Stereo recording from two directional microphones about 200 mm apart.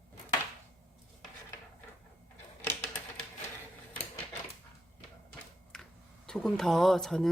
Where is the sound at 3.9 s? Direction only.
10° left (ahead or behind).